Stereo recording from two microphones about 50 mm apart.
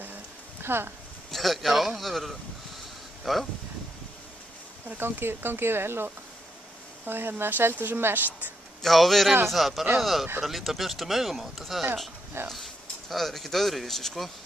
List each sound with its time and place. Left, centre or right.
0.6 s speech: right
1.3 s speech: centre
4.8 s speech: right
8.8 s speech: centre